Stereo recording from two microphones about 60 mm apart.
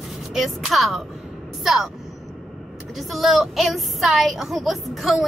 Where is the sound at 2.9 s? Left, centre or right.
Centre.